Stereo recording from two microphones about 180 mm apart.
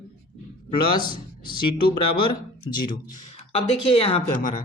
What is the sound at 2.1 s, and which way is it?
Speech, 25° left (ahead or behind).